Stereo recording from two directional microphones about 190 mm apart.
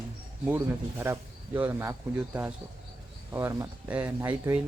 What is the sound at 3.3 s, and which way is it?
Speech, 15° right (ahead or behind).